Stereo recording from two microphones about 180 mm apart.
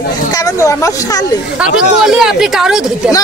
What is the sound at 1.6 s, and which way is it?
Speech, 5° right (ahead or behind).